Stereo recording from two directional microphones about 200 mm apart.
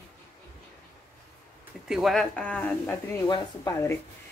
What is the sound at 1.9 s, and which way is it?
Speech, centre (ahead or behind).